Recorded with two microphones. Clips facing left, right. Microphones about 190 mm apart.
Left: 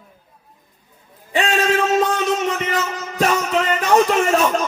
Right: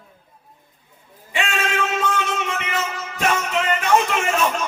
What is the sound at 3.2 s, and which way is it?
Music, 35° left (ahead or behind).